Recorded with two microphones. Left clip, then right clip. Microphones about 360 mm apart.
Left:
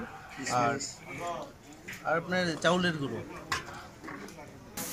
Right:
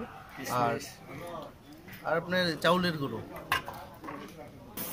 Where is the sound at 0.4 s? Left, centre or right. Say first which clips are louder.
Left 1 dB; centre.